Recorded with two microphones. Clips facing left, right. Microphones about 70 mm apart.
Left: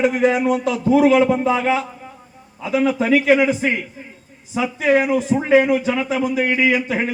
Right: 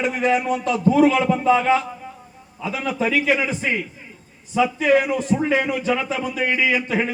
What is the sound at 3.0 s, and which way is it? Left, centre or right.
Speech, left.